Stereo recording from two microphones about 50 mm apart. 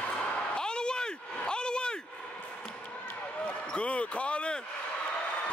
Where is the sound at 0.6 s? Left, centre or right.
Centre.